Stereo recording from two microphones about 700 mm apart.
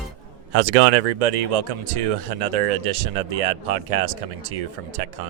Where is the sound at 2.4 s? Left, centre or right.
Right.